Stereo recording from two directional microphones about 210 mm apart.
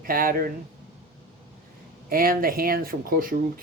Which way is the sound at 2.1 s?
45° right (ahead or behind).